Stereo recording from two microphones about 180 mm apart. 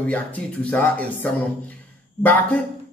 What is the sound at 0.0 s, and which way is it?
A man's voice, 10° left (ahead or behind).